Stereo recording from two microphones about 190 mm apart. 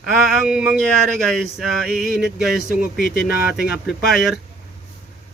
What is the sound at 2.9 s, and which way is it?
Speech, 50° left (ahead or behind).